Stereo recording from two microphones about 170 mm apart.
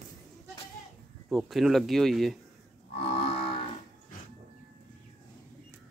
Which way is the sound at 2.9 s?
35° left (ahead or behind).